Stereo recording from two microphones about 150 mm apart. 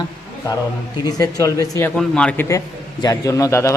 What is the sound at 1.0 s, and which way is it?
Speech, 25° left (ahead or behind).